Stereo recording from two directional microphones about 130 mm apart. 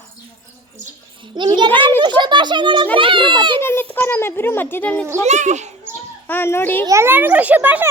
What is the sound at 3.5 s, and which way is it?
A child's voice, 15° left (ahead or behind).